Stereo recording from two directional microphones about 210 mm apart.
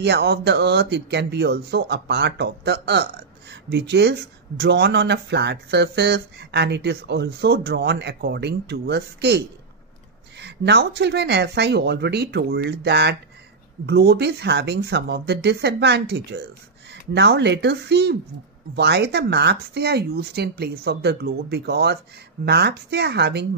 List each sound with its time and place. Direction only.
0.0 s speech: 50° right (ahead or behind)
10.4 s speech: 55° right (ahead or behind)